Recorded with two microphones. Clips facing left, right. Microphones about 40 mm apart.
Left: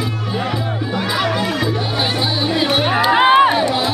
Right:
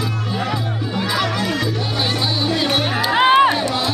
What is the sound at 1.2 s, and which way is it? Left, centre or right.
Chatter, centre.